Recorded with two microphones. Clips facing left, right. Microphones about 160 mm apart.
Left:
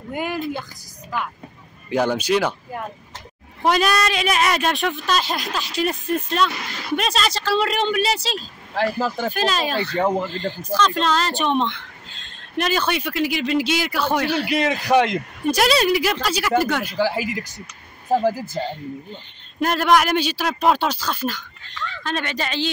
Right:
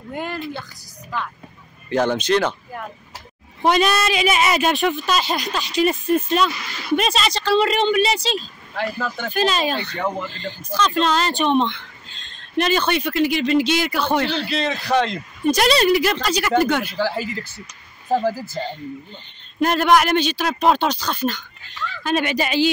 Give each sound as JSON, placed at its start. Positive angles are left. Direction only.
{"t": 0.1, "sound": "speech", "side_deg": 10}
{"t": 3.6, "sound": "speech", "side_deg": 0}
{"t": 8.7, "sound": "speech", "side_deg": 35}
{"t": 9.3, "sound": "speech", "side_deg": 0}
{"t": 9.9, "sound": "speech", "side_deg": 35}
{"t": 10.3, "sound": "speech", "side_deg": 0}
{"t": 19.6, "sound": "speech", "side_deg": 0}
{"t": 21.6, "sound": "speech", "side_deg": -10}